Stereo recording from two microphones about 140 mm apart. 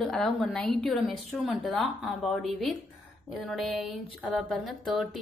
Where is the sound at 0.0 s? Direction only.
Centre (ahead or behind).